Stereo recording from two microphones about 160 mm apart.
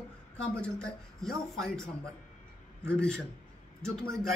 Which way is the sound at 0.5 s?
5° left (ahead or behind).